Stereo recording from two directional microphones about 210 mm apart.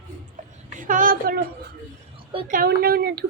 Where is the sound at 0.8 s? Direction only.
40° right (ahead or behind).